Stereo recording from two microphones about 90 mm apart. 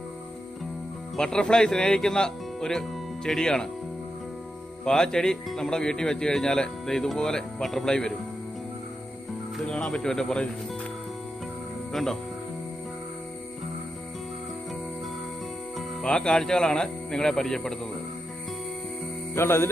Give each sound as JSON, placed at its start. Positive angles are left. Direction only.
{"t": 1.1, "sound": "speech", "side_deg": 10}
{"t": 4.9, "sound": "speech", "side_deg": 5}
{"t": 9.6, "sound": "speech", "side_deg": 10}
{"t": 11.9, "sound": "speech", "side_deg": 5}
{"t": 16.0, "sound": "speech", "side_deg": 10}
{"t": 19.3, "sound": "music", "side_deg": 30}